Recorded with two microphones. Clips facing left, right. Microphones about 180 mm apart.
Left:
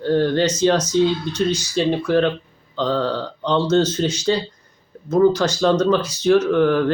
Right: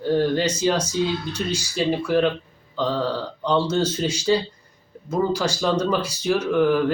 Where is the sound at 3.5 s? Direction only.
5° right (ahead or behind).